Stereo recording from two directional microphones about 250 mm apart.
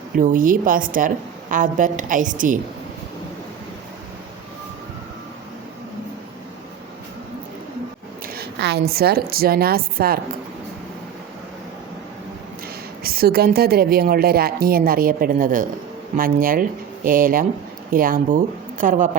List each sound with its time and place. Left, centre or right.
0.2 s a woman's voice: right
8.4 s a sound: right
8.9 s a woman's voice: right
13.0 s a woman's voice: right